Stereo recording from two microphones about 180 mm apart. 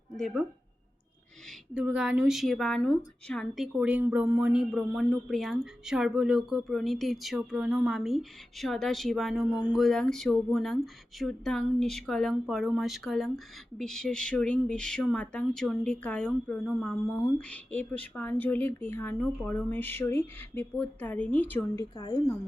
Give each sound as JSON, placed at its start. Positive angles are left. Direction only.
{"t": 0.2, "sound": "a woman's voice", "side_deg": 0}
{"t": 1.7, "sound": "a woman's voice", "side_deg": -5}
{"t": 21.9, "sound": "a woman's voice", "side_deg": 20}